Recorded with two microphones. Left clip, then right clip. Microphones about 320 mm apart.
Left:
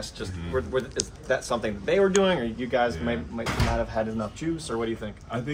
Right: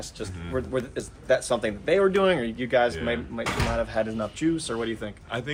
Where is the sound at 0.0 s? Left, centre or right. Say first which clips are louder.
Left 1 dB; right.